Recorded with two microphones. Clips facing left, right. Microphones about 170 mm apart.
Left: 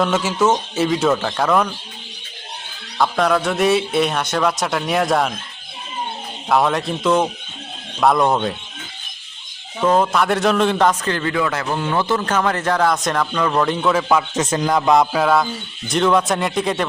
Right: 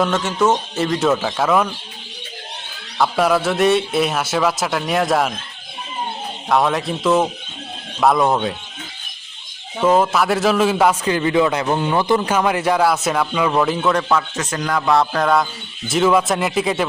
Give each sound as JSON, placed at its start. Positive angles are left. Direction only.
{"t": 0.0, "sound": "a man's voice", "side_deg": 5}
{"t": 3.0, "sound": "a man's voice", "side_deg": -5}
{"t": 6.5, "sound": "a man's voice", "side_deg": 0}
{"t": 9.8, "sound": "a man's voice", "side_deg": -5}
{"t": 14.1, "sound": "music", "side_deg": 15}
{"t": 15.9, "sound": "a man's voice", "side_deg": -5}